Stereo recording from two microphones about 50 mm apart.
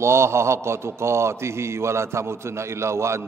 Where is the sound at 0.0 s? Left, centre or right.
Right.